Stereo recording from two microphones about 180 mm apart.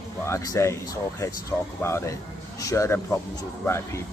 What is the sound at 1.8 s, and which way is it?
Speech, 15° left (ahead or behind).